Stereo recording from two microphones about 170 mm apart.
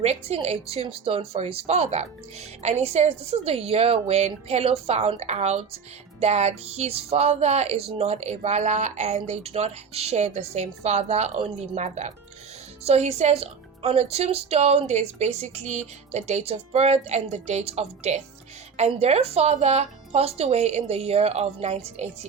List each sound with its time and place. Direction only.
0.0 s speech: 40° right (ahead or behind)